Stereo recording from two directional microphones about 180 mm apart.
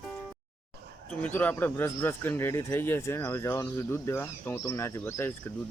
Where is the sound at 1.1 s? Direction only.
10° left (ahead or behind).